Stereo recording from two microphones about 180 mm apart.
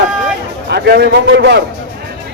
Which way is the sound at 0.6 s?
65° right (ahead or behind).